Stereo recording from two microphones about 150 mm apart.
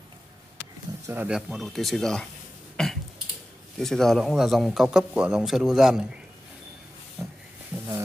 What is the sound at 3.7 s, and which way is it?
A man's voice, 5° left (ahead or behind).